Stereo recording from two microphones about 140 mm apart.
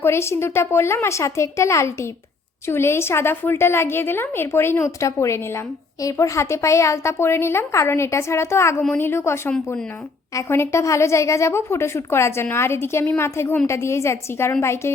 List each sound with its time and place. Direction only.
0.0 s a woman's voice: 20° left (ahead or behind)